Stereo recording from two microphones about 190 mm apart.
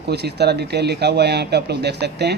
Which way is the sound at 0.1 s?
60° right (ahead or behind).